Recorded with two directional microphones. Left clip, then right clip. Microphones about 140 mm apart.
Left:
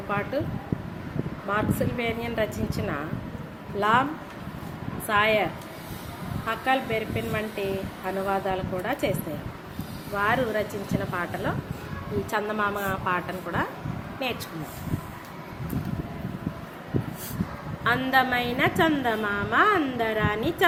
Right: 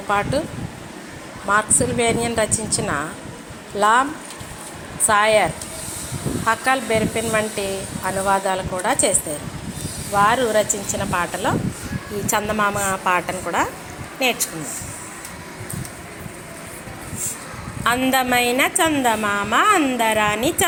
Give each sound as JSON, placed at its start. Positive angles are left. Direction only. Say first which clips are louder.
{"t": 0.1, "sound": "a woman's voice", "louder": "right 8 dB", "side_deg": -25}
{"t": 1.5, "sound": "a woman's voice", "louder": "right 9 dB", "side_deg": -20}
{"t": 5.0, "sound": "a woman's voice", "louder": "right 7 dB", "side_deg": -25}
{"t": 10.2, "sound": "a woman's voice", "louder": "right 8 dB", "side_deg": -25}
{"t": 17.8, "sound": "a woman's voice", "louder": "right 4 dB", "side_deg": -25}